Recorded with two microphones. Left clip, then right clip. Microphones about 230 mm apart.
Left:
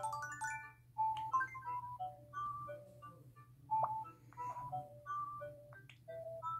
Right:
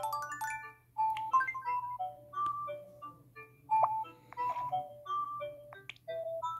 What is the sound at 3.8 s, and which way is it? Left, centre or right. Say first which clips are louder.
Music: right 8 dB; right.